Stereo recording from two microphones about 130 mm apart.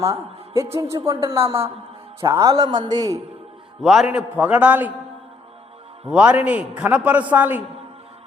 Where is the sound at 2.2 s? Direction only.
25° right (ahead or behind).